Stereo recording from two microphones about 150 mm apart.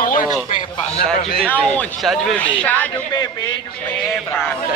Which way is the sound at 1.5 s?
5° left (ahead or behind).